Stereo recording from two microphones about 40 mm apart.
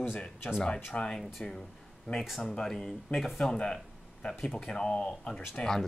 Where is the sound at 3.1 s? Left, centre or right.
Left.